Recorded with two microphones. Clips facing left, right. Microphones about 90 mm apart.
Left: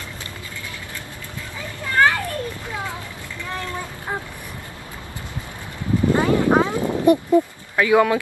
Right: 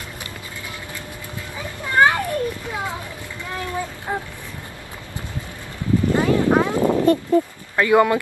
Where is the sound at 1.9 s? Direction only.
20° right (ahead or behind).